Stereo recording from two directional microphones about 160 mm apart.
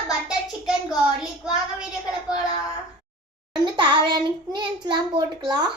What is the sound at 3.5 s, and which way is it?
Child singing, 30° right (ahead or behind).